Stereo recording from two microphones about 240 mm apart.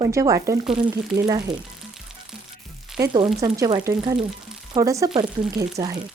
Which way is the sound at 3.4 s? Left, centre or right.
Centre.